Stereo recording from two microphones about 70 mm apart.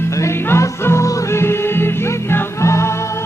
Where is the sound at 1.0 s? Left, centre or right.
Left.